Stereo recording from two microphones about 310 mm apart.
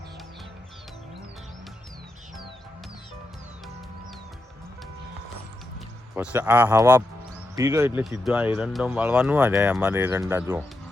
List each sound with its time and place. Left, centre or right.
6.1 s speech: centre